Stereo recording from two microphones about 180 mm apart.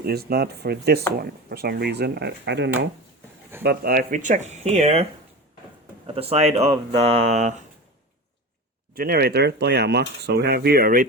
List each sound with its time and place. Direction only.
0.0 s speech: 60° right (ahead or behind)
3.6 s speech: 60° right (ahead or behind); by 5.0 s 40° right (ahead or behind)
6.1 s speech: 35° right (ahead or behind)
9.0 s speech: 60° right (ahead or behind)